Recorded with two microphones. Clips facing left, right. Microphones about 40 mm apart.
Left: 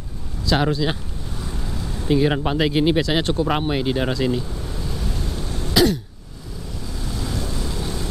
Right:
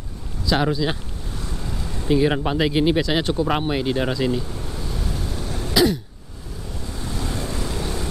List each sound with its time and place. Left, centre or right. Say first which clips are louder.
0.6 s speech: even; centre
4.1 s throat clearing: left 1 dB; centre
7.0 s vehicle: even; right